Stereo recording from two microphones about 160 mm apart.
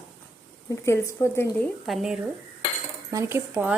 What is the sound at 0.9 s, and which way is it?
Speech, 15° left (ahead or behind).